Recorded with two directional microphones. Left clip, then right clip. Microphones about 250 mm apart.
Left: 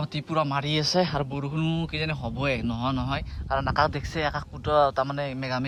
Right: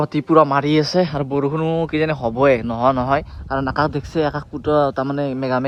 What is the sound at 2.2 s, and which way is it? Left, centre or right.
Speech, left.